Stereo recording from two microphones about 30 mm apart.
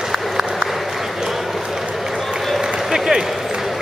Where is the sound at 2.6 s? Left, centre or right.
Centre.